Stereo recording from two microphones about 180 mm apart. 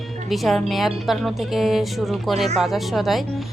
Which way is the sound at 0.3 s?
Centre (ahead or behind).